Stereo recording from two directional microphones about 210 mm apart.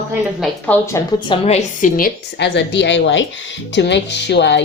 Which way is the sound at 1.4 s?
35° left (ahead or behind).